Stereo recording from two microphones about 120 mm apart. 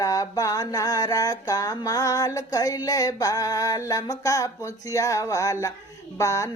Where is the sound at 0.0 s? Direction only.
30° left (ahead or behind).